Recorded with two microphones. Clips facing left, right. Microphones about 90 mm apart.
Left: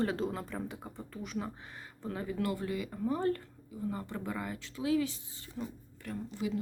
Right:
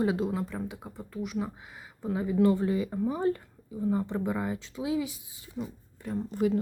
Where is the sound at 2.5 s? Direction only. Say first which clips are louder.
Right 9 dB; 25° right (ahead or behind).